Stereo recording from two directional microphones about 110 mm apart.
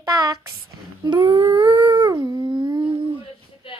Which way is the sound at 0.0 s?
35° right (ahead or behind).